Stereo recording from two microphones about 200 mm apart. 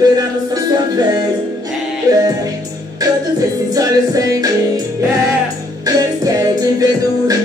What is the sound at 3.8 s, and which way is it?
Music, 15° right (ahead or behind).